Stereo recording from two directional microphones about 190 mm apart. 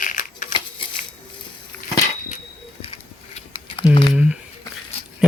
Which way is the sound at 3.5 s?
25° left (ahead or behind).